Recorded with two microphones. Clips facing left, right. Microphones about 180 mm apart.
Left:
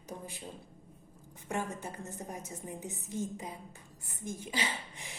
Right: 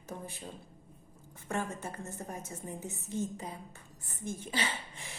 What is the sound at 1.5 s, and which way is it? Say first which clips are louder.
A woman's voice: right 1 dB; 15° left (ahead or behind).